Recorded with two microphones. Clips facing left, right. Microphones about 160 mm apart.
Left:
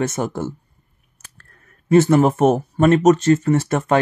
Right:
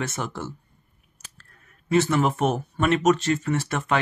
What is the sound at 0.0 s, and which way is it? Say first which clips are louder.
Speech: left 8 dB; 45° left (ahead or behind).